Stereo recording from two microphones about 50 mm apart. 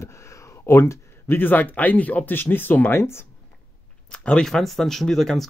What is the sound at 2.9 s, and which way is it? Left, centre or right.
Speech, left.